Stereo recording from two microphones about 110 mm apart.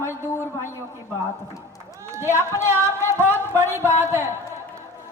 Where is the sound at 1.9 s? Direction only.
30° right (ahead or behind).